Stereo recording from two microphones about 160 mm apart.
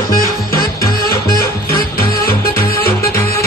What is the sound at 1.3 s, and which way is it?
Music, 65° left (ahead or behind).